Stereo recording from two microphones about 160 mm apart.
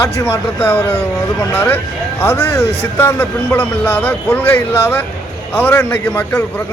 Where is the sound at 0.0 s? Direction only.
15° left (ahead or behind).